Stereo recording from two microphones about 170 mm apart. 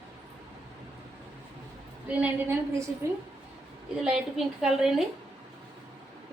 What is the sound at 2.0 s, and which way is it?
Speech, 10° right (ahead or behind).